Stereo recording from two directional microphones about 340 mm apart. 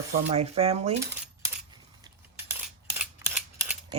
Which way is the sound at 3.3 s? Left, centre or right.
Centre.